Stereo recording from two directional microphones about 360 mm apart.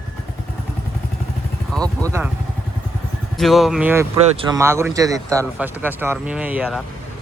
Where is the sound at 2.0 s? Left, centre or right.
Centre.